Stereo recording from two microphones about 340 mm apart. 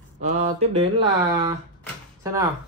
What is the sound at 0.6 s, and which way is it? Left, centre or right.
Speech, centre.